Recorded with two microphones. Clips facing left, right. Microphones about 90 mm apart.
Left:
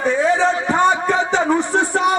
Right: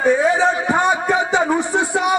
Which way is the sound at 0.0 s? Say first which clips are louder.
Right 1 dB; 15° right (ahead or behind).